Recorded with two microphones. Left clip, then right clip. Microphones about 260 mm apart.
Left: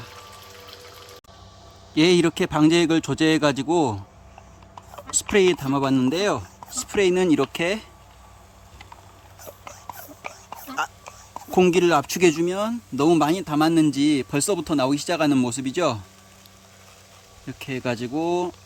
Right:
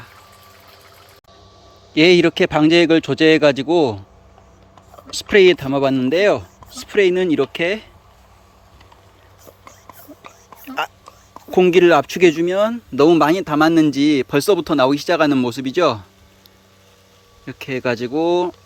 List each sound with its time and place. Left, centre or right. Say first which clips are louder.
2.0 s speech: right 6 dB; centre
5.1 s speech: right 7 dB; centre
10.8 s whispering: right 4 dB; centre
11.5 s speech: right 6 dB; centre
17.4 s speech: right 7 dB; centre